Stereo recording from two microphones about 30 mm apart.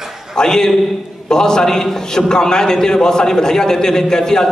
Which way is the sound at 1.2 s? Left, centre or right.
Left.